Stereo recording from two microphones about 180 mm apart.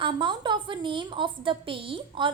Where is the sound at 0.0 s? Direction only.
25° right (ahead or behind).